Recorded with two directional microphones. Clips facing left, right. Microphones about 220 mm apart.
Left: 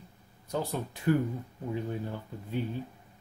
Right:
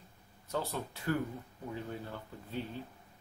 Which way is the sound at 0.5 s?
15° left (ahead or behind).